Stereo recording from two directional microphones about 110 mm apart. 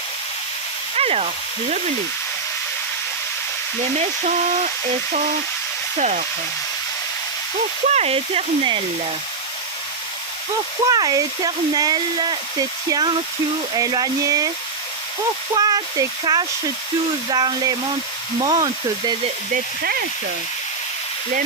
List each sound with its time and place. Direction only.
0.9 s hiss: 65° right (ahead or behind)
6.0 s speech: 90° right
7.9 s speech: 70° right (ahead or behind); by 8.8 s 55° right (ahead or behind)
10.8 s speech: 35° right (ahead or behind)
15.5 s speech: 35° right (ahead or behind)